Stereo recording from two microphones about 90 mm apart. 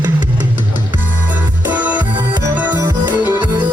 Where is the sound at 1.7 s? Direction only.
15° right (ahead or behind).